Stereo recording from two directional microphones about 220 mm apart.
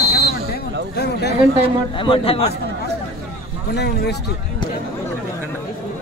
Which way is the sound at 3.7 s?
50° left (ahead or behind).